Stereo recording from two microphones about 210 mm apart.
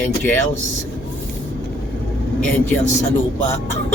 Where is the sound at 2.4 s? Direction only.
10° left (ahead or behind).